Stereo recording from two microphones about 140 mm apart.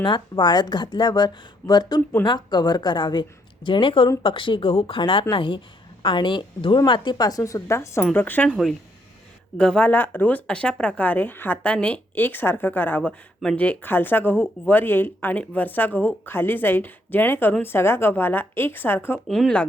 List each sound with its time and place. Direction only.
0.0 s a woman's voice: 30° left (ahead or behind); by 8.4 s 15° left (ahead or behind)
8.4 s speech: 5° right (ahead or behind)
9.6 s speech: 5° left (ahead or behind)
19.3 s speech: 5° left (ahead or behind)